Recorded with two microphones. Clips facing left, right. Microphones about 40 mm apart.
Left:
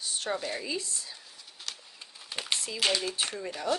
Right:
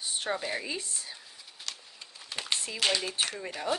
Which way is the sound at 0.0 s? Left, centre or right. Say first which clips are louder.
Even; right.